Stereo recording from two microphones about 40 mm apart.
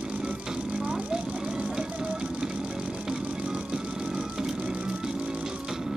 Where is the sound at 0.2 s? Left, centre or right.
Right.